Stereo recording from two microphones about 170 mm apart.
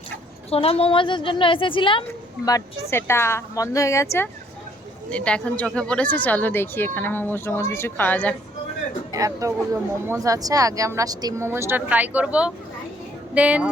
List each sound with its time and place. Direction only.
0.5 s a woman's voice: 35° left (ahead or behind); by 8.4 s 10° left (ahead or behind)
9.1 s speech: 20° right (ahead or behind)